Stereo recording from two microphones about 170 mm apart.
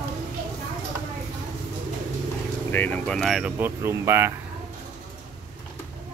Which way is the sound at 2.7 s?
10° left (ahead or behind).